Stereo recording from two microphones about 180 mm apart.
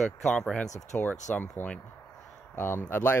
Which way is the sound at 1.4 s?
10° left (ahead or behind).